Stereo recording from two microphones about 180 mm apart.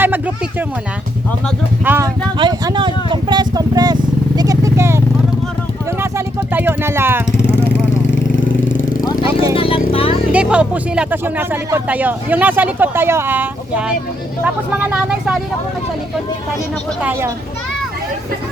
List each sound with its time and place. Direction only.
1.8 s speech: 10° right (ahead or behind)
2.4 s vehicle: 25° right (ahead or behind)
6.0 s a sound: 10° right (ahead or behind)
8.8 s vehicle: 50° left (ahead or behind)
9.6 s vehicle: 30° left (ahead or behind)
10.3 s speech: 5° right (ahead or behind)
17.0 s speech: 10° right (ahead or behind)